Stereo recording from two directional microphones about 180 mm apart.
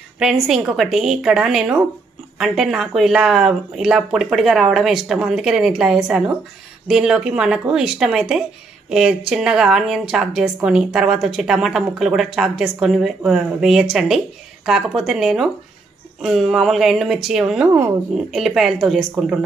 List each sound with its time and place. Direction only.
0.2 s speech: 5° right (ahead or behind)